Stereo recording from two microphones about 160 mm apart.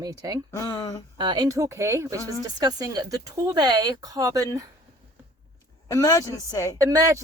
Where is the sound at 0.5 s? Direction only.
20° left (ahead or behind).